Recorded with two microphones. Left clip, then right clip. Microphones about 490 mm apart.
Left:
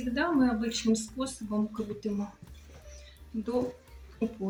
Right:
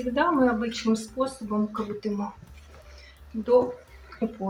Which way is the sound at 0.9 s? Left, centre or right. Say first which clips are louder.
Right 3 dB; left.